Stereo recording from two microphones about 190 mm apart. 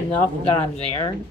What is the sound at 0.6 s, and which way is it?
Speech, 25° left (ahead or behind).